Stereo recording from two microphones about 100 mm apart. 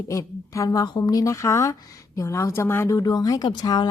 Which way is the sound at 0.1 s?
30° left (ahead or behind).